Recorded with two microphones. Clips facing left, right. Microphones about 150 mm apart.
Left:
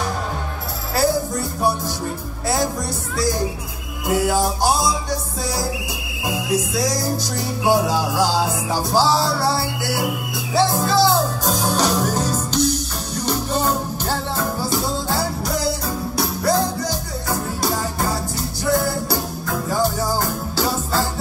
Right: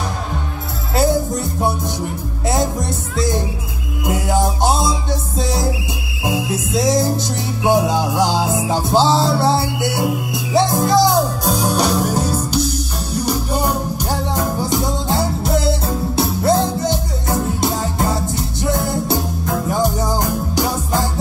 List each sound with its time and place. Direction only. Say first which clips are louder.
0.9 s music: right 3 dB; 20° right (ahead or behind)